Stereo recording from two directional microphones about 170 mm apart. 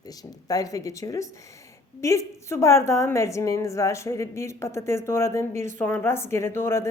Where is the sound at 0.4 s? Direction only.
20° left (ahead or behind).